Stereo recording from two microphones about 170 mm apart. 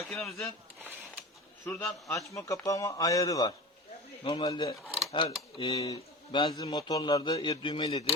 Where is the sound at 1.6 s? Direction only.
15° left (ahead or behind).